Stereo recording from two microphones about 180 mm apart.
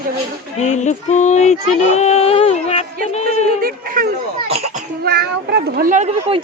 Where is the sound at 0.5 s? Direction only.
40° left (ahead or behind).